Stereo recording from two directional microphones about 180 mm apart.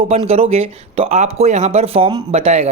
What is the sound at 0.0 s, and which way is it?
Speech, 30° right (ahead or behind).